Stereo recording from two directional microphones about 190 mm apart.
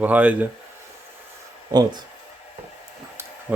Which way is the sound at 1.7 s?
20° right (ahead or behind).